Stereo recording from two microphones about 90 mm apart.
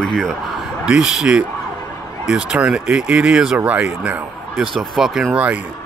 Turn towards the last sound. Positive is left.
turn(degrees=-15)  # may be behind; listen again after turning